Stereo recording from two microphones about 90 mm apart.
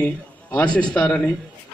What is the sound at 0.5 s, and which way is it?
Speech, 10° left (ahead or behind).